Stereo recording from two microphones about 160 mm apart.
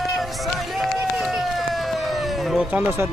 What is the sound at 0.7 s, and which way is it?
Run, centre (ahead or behind).